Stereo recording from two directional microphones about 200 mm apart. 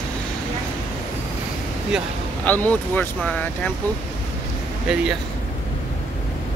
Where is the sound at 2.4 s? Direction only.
10° left (ahead or behind).